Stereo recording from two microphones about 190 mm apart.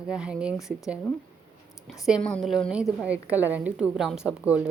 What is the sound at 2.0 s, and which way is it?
A woman's voice, centre (ahead or behind).